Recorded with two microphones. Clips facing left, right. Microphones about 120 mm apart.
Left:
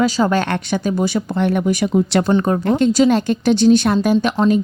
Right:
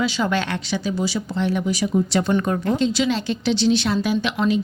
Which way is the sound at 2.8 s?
45° left (ahead or behind).